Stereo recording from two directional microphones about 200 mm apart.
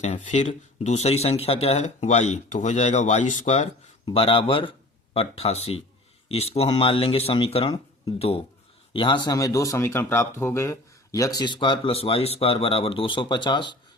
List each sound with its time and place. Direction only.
0.0 s speech: 35° left (ahead or behind)
8.9 s speech: 25° left (ahead or behind)